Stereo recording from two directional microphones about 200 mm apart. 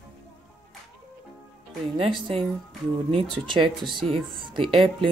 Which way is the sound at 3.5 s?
25° right (ahead or behind).